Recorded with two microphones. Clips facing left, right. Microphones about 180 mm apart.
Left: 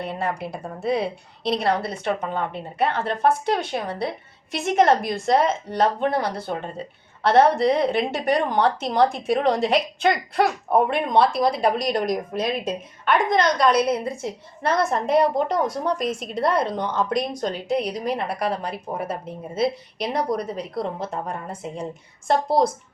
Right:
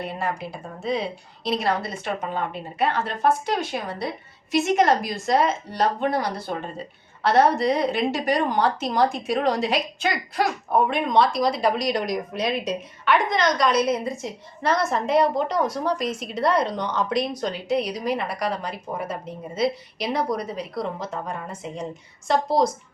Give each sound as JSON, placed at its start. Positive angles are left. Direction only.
{"t": 0.0, "sound": "a woman's voice", "side_deg": 60}